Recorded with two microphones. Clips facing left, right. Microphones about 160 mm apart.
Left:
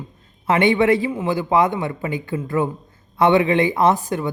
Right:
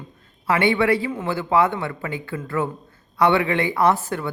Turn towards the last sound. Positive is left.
turn(degrees=15)  # may be behind; listen again after turning